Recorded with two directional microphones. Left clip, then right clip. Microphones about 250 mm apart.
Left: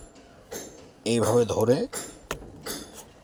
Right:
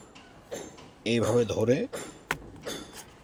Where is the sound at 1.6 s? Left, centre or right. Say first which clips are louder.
Left 3 dB; centre.